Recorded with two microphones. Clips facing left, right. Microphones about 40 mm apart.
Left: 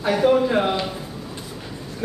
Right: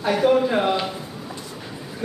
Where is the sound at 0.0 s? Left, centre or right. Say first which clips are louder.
Even; centre.